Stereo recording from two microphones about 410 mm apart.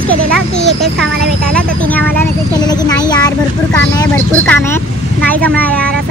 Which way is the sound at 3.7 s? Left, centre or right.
Centre.